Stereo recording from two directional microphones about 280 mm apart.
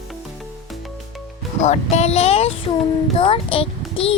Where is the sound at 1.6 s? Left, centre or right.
Left.